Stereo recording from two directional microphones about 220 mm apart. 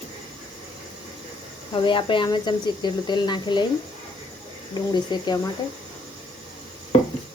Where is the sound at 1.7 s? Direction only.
20° left (ahead or behind).